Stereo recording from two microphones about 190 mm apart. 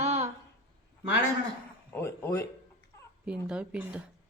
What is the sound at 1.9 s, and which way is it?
Speech, 15° left (ahead or behind).